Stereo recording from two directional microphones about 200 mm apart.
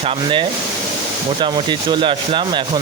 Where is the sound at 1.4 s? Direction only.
20° right (ahead or behind).